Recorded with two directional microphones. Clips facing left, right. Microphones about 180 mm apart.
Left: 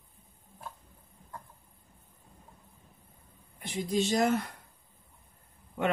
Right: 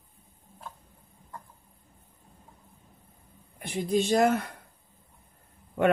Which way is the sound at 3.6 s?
55° right (ahead or behind).